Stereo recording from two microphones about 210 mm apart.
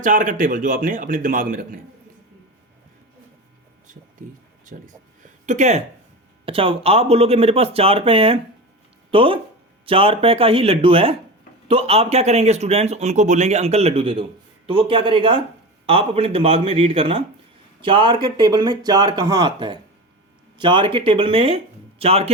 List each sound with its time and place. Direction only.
0.0 s speech: 40° right (ahead or behind)
5.2 s a sound: 35° right (ahead or behind)
6.4 s speech: 25° right (ahead or behind)